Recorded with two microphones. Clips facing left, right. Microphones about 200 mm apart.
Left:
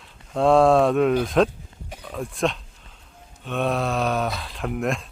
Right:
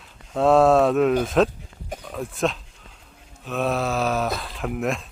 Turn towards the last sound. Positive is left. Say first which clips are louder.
# even
turn(degrees=0)  # may be behind; listen again after turning